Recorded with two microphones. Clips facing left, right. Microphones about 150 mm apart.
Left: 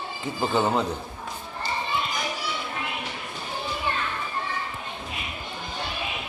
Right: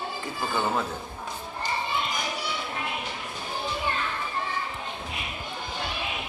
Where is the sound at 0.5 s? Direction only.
20° left (ahead or behind).